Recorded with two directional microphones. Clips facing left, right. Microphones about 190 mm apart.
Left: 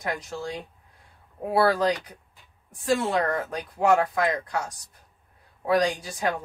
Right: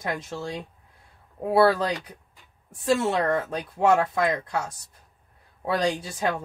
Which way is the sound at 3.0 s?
25° right (ahead or behind).